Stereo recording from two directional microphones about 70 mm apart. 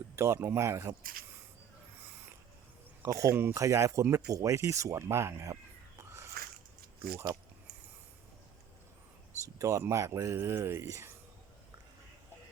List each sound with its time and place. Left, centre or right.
0.2 s speech: right
3.0 s speech: right
6.0 s a sound: right
9.6 s speech: right